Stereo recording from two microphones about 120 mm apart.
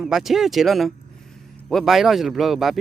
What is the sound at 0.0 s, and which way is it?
Speech, centre (ahead or behind).